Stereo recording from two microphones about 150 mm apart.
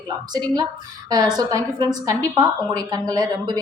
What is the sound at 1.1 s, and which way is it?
A woman's voice, 25° right (ahead or behind).